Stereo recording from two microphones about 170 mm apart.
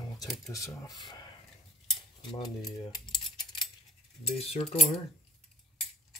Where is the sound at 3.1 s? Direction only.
25° left (ahead or behind).